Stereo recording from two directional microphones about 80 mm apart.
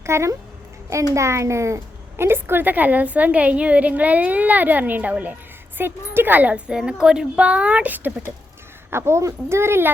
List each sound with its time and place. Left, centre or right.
0.0 s a woman's voice: right
8.9 s speech: right